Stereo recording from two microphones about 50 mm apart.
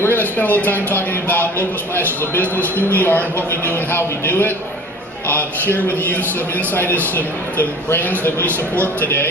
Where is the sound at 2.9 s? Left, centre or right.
Left.